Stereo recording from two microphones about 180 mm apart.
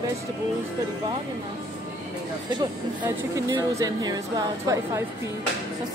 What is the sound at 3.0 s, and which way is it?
Speech, 25° right (ahead or behind).